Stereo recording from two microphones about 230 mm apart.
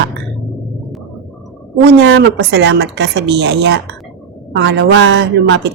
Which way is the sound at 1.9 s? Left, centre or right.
Right.